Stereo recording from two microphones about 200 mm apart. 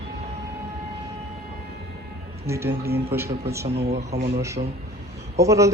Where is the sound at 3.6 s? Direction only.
30° right (ahead or behind).